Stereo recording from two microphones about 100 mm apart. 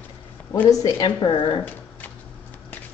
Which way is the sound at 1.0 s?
50° left (ahead or behind).